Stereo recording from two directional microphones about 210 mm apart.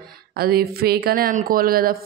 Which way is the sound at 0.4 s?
45° right (ahead or behind).